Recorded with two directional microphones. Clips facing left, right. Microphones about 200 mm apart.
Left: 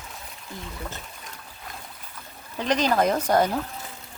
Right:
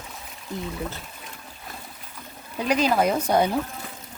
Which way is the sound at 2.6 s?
10° right (ahead or behind).